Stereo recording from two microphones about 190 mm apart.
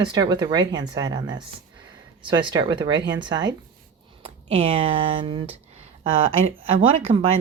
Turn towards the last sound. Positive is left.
turn(degrees=-35)  # may be behind; listen again after turning